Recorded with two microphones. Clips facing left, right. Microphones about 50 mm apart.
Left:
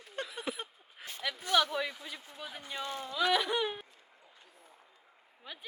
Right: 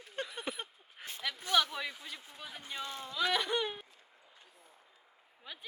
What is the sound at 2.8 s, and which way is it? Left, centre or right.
Speech, centre.